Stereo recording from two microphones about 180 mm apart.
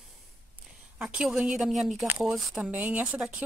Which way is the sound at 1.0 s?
5° right (ahead or behind).